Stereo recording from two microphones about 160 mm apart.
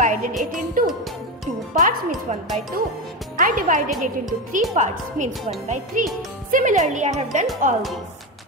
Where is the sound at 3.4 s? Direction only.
60° right (ahead or behind).